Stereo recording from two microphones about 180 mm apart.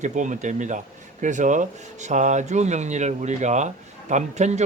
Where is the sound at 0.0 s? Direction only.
45° right (ahead or behind).